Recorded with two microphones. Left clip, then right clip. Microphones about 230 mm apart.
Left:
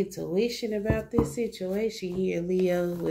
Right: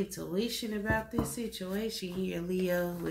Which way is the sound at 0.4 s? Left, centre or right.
Right.